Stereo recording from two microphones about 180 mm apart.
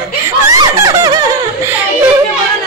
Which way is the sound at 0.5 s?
20° right (ahead or behind).